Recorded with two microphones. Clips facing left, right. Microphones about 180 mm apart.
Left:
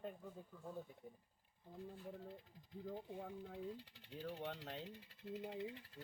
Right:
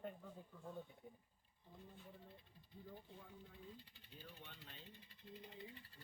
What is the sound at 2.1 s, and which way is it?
Speech, 90° left.